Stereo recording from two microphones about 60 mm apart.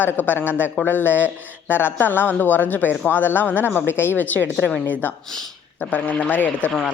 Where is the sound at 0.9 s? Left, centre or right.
Left.